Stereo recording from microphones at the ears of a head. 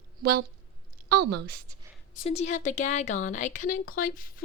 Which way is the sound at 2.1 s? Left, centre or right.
Left.